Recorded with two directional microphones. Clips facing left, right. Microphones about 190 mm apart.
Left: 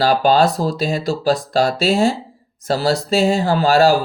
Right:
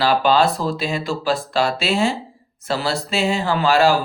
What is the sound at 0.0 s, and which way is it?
Speech, 40° left (ahead or behind).